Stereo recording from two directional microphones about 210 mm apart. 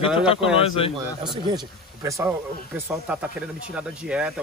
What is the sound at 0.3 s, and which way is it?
Speech, 25° left (ahead or behind).